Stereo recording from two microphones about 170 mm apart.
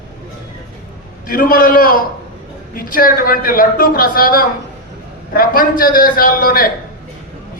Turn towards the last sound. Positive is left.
turn(degrees=55)  # may be behind; listen again after turning